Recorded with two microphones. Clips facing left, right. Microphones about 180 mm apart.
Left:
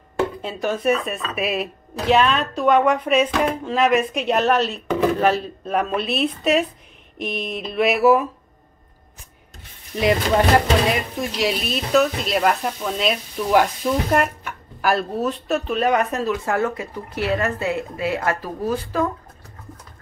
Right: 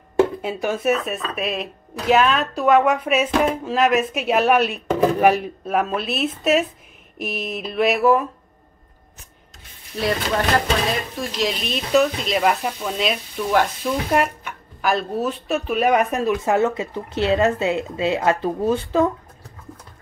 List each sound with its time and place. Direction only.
0.4 s speech: 10° right (ahead or behind)
5.7 s speech: centre (ahead or behind)
9.9 s speech: 15° left (ahead or behind); by 19.0 s 25° right (ahead or behind)